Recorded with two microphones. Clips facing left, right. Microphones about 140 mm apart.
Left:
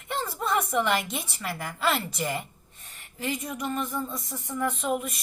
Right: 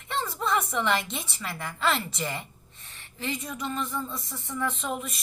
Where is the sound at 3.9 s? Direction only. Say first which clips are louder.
Left 2 dB; 15° left (ahead or behind).